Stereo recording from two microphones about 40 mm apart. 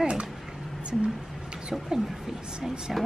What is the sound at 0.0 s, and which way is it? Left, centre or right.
Speech, right.